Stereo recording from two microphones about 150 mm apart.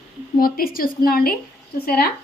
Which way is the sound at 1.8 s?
90° left.